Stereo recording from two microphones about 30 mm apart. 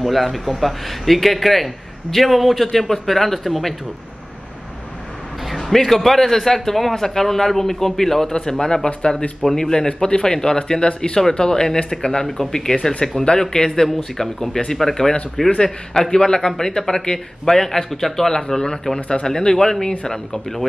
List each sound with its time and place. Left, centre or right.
0.0 s a man's voice: centre
5.6 s a man's voice: centre
8.3 s a man's voice: left
14.1 s a man's voice: centre
18.3 s a man's voice: left